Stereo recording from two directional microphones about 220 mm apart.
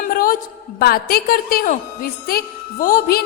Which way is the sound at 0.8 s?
45° left (ahead or behind).